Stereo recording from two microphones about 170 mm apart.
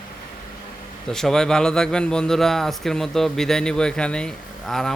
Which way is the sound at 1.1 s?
5° left (ahead or behind).